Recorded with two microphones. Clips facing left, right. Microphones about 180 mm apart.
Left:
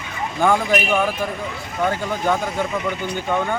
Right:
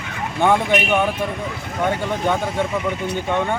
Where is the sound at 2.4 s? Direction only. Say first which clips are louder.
Right 1 dB; 30° right (ahead or behind).